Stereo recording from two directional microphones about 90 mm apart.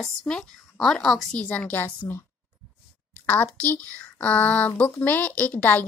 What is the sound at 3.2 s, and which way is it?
A child's voice, 15° left (ahead or behind).